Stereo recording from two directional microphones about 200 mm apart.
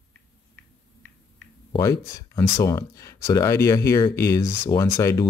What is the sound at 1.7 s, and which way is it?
Speech, 15° left (ahead or behind).